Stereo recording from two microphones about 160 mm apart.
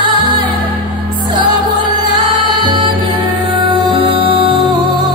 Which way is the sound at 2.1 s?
25° right (ahead or behind).